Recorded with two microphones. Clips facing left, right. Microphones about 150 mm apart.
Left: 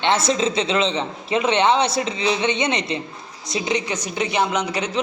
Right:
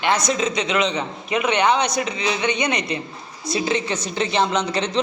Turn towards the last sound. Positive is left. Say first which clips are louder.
# right 1 dB
turn(degrees=10)  # may be behind; listen again after turning